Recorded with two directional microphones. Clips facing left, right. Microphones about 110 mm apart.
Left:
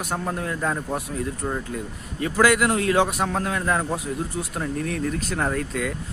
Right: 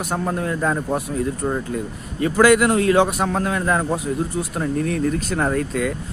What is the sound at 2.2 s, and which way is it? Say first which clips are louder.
A man's voice: right 5 dB; 30° right (ahead or behind).